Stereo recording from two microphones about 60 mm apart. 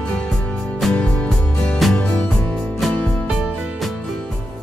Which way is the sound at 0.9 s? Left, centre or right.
Centre.